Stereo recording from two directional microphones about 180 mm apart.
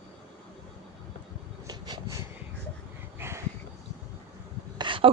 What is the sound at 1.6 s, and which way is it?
Vehicle, 20° right (ahead or behind).